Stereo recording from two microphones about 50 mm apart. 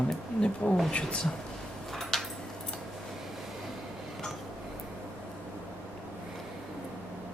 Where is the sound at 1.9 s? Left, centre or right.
Centre.